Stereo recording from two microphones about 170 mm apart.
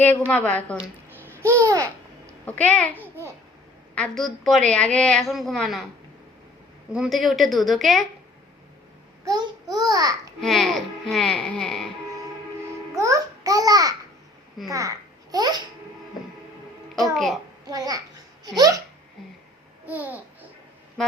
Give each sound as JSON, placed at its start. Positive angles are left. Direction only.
{"t": 0.3, "sound": "a woman's voice", "side_deg": 10}
{"t": 1.3, "sound": "babbling", "side_deg": -15}
{"t": 2.5, "sound": "a woman's voice", "side_deg": 10}
{"t": 3.9, "sound": "a woman's voice", "side_deg": 5}
{"t": 6.9, "sound": "a woman's voice", "side_deg": 0}
{"t": 9.2, "sound": "a child's voice", "side_deg": -20}
{"t": 10.4, "sound": "a woman's voice", "side_deg": 0}
{"t": 13.0, "sound": "a child's voice", "side_deg": -20}
{"t": 17.7, "sound": "a child's voice", "side_deg": -20}
{"t": 19.8, "sound": "babbling", "side_deg": -10}